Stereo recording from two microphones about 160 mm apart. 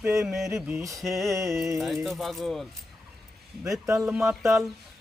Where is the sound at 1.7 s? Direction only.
Centre (ahead or behind).